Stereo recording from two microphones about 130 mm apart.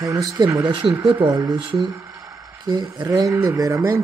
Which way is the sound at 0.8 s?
40° right (ahead or behind).